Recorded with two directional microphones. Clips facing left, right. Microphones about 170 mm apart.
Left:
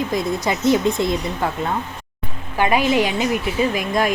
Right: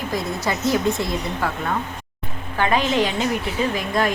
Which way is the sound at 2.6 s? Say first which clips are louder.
Left 2 dB; 10° left (ahead or behind).